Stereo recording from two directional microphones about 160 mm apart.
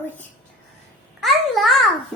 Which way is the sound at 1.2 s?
Centre (ahead or behind).